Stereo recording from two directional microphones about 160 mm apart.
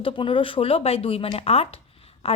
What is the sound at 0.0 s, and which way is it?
A woman's voice, 30° left (ahead or behind).